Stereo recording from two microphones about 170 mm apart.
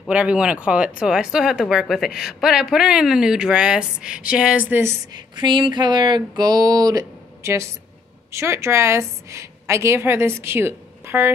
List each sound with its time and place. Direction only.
0.1 s speech: 5° right (ahead or behind)
5.1 s a sound: 25° right (ahead or behind)
8.3 s a woman's voice: 15° right (ahead or behind)